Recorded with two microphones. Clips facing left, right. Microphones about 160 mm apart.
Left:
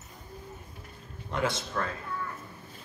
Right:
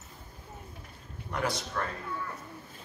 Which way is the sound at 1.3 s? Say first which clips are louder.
Left 2 dB; 25° left (ahead or behind).